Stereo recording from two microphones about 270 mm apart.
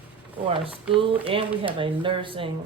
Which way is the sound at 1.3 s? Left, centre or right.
Centre.